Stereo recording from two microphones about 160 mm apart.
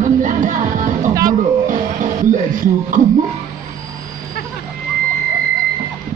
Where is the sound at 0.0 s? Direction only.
55° right (ahead or behind).